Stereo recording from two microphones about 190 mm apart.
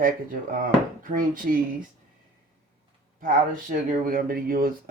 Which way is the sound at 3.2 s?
45° right (ahead or behind).